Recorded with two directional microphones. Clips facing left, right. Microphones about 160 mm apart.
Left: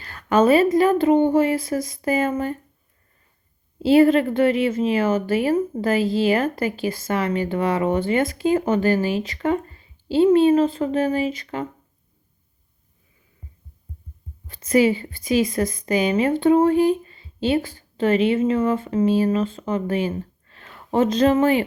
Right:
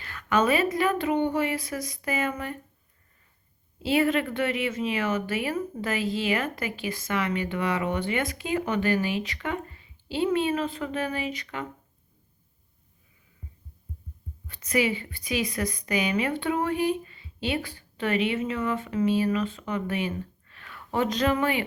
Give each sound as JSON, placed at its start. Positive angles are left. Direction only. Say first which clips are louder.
{"t": 0.0, "sound": "a woman's voice", "louder": "left 7 dB", "side_deg": 35}
{"t": 3.8, "sound": "a woman's voice", "louder": "left 9 dB", "side_deg": 35}
{"t": 14.4, "sound": "a woman's voice", "louder": "left 8 dB", "side_deg": 30}